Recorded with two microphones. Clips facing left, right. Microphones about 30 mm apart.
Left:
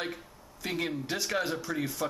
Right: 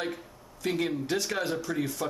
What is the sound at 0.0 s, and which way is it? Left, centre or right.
A man's voice, centre.